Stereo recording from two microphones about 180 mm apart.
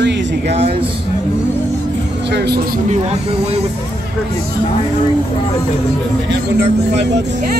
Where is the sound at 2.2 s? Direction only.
70° right (ahead or behind).